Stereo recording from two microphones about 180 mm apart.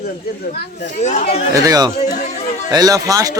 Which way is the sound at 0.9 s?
40° left (ahead or behind).